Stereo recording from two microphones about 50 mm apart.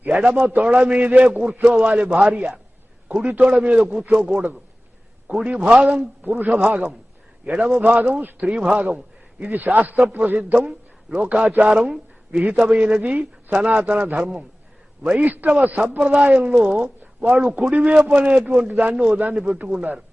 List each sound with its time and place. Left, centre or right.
0.1 s a man's voice: right
9.4 s a man's voice: right
15.2 s a man's voice: right